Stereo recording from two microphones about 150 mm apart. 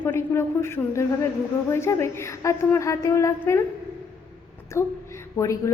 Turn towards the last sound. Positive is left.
turn(degrees=20)  # may be behind; listen again after turning